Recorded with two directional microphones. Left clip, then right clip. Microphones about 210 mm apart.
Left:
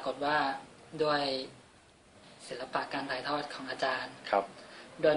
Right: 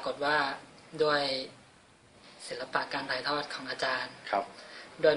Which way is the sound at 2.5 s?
5° right (ahead or behind).